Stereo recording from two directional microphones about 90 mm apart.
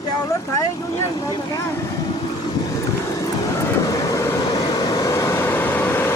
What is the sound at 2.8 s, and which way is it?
Vehicle, 35° left (ahead or behind).